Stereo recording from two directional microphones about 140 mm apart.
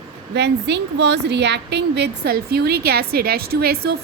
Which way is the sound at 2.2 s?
90° right.